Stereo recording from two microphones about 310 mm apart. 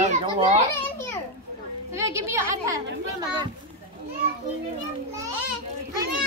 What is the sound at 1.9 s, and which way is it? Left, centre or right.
Speech, centre.